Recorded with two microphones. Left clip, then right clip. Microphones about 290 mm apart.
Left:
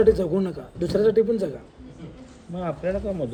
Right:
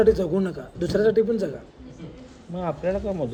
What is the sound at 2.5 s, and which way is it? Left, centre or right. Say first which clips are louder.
Speech: right 1 dB; centre.